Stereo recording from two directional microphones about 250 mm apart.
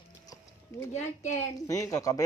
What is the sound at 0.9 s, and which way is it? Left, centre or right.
Speech, left.